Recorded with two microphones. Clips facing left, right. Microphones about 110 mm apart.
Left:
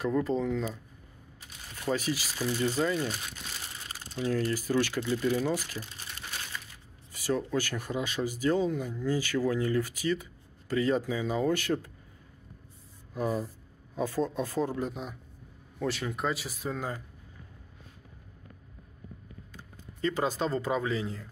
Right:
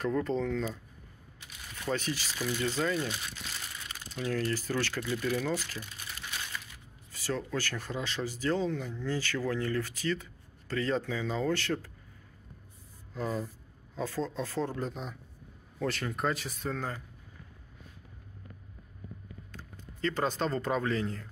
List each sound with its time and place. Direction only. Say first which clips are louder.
0.0 s speech: left 2 dB; 5° left (ahead or behind)
1.9 s speech: left 3 dB; 10° left (ahead or behind)
2.4 s speech: left 3 dB; 30° left (ahead or behind)
2.7 s speech: left 2 dB; 15° left (ahead or behind)
3.7 s crumpling: left 2 dB; 35° left (ahead or behind)
4.6 s speech: left 5 dB; 15° left (ahead or behind)
5.0 s speech: left 3 dB; 25° left (ahead or behind)
5.4 s speech: left 3 dB; 15° left (ahead or behind)
7.1 s a sound: left 4 dB; 15° left (ahead or behind)
7.5 s speech: left 4 dB; 15° left (ahead or behind)
13.9 s speech: left 4 dB; 15° left (ahead or behind)
19.5 s speech: right 1 dB; 10° left (ahead or behind)